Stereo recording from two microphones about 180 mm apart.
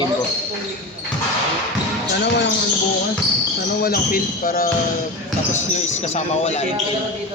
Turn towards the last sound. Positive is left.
turn(degrees=35)  # may be behind; listen again after turning